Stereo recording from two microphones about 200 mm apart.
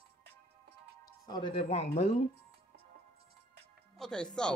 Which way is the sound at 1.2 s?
20° left (ahead or behind).